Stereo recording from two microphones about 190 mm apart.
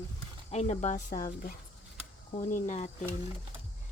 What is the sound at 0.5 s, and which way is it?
Speech, 35° left (ahead or behind).